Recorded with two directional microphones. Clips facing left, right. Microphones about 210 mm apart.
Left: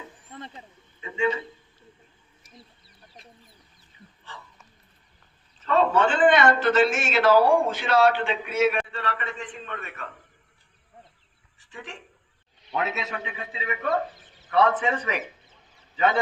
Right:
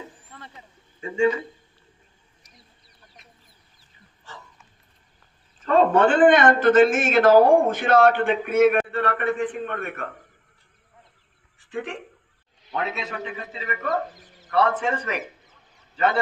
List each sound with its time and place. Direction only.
0.3 s a sound: 20° left (ahead or behind)
1.0 s a man's voice: 45° right (ahead or behind)
5.5 s a man's voice: 50° right (ahead or behind)
11.6 s speech: 55° right (ahead or behind)
12.7 s a man's voice: centre (ahead or behind)